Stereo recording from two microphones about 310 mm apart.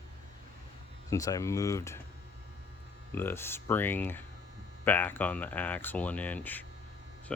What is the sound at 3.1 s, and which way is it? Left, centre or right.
Speech, centre.